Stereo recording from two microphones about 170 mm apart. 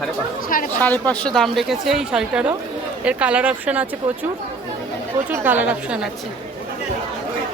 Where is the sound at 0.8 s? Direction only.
10° left (ahead or behind); by 3.9 s 10° right (ahead or behind).